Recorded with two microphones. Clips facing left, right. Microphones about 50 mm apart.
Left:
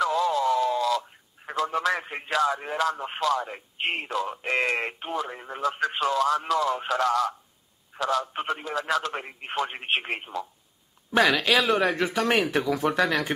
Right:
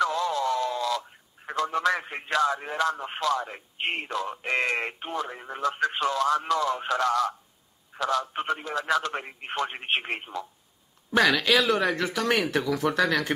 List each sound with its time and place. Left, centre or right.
0.0 s speech: centre